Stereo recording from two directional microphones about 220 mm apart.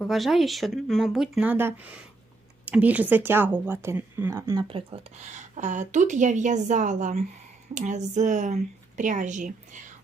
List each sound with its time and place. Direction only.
0.0 s speech: centre (ahead or behind)
4.7 s speech: 30° right (ahead or behind)